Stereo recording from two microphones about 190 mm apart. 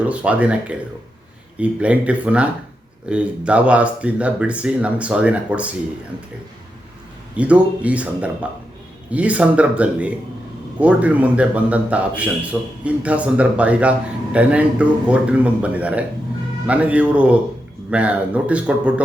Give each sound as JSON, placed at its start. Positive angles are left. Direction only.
{"t": 0.0, "sound": "a man's voice", "side_deg": -5}
{"t": 7.3, "sound": "a man's voice", "side_deg": -5}